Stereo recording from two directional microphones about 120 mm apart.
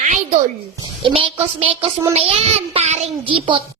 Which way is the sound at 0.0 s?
80° right.